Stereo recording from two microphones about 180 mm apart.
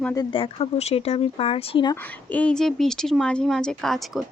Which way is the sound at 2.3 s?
5° left (ahead or behind).